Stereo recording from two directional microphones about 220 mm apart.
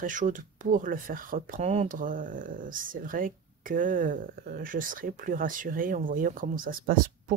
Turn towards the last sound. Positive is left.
turn(degrees=-40)  # may be behind; listen again after turning